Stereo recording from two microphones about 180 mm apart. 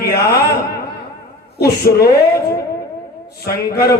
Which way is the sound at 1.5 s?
60° left (ahead or behind).